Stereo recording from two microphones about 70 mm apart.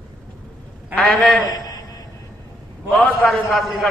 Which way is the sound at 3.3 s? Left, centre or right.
Centre.